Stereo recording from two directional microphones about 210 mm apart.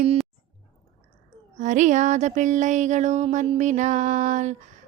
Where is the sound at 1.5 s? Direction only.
35° right (ahead or behind).